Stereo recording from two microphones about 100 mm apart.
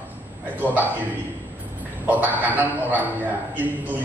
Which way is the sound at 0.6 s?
15° right (ahead or behind).